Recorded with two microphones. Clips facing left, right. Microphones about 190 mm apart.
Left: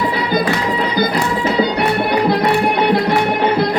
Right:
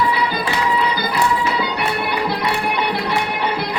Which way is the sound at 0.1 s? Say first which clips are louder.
Left 4 dB; 45° left (ahead or behind).